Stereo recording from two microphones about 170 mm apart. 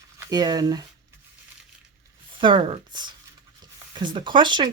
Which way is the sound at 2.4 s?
30° right (ahead or behind).